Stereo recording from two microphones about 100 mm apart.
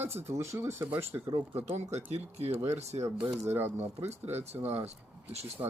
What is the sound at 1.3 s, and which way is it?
Speech, 80° right.